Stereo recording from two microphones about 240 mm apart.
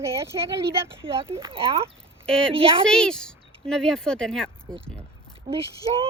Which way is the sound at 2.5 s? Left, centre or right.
Right.